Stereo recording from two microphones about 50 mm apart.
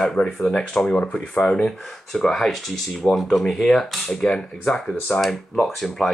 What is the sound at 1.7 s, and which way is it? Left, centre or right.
Speech, centre.